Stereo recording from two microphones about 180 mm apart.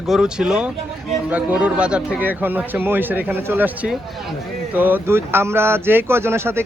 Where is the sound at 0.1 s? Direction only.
5° right (ahead or behind).